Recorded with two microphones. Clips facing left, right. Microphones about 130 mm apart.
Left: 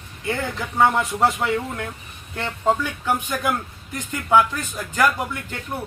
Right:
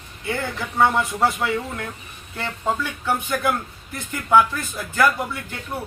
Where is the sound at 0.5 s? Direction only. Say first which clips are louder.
Even; 20° left (ahead or behind).